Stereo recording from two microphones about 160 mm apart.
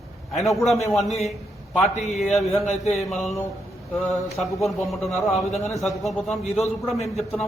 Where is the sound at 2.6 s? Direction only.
45° left (ahead or behind).